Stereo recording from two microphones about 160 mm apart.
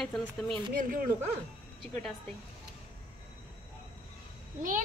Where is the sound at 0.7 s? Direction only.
60° right (ahead or behind).